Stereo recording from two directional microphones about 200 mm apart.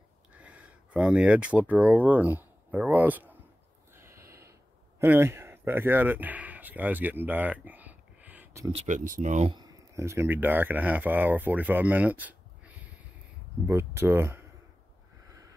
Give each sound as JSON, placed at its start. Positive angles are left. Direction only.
{"t": 0.3, "sound": "speech", "side_deg": -5}
{"t": 3.9, "sound": "a sound", "side_deg": -15}
{"t": 5.0, "sound": "speech", "side_deg": -10}
{"t": 8.7, "sound": "speech", "side_deg": -40}
{"t": 9.6, "sound": "speech", "side_deg": -15}